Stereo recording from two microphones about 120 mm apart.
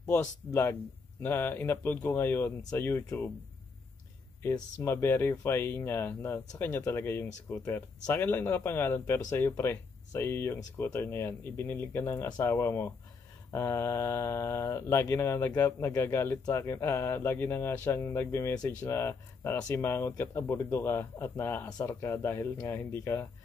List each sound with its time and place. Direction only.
0.1 s speech: 20° left (ahead or behind)
4.4 s speech: 20° left (ahead or behind)